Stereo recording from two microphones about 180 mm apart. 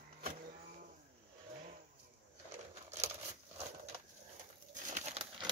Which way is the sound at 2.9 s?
40° right (ahead or behind).